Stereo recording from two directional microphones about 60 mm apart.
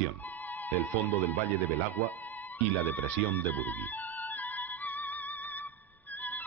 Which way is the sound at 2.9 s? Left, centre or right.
Left.